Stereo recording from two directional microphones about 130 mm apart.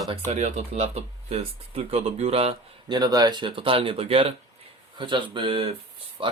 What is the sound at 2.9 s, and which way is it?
Speech, 30° right (ahead or behind).